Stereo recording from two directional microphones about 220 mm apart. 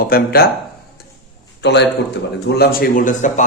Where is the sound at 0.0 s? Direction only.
45° left (ahead or behind).